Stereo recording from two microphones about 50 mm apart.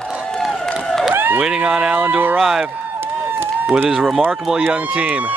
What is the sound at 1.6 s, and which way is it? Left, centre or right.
Speech, centre.